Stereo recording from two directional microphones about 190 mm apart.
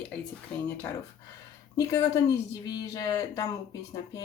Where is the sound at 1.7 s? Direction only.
20° left (ahead or behind).